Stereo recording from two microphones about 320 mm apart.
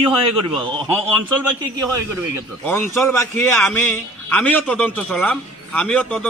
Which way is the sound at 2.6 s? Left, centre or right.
Centre.